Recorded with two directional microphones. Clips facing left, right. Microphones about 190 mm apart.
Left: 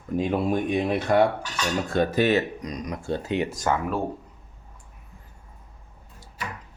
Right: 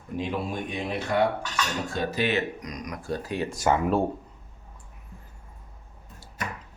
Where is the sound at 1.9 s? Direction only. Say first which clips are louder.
Left 7 dB; 55° left (ahead or behind).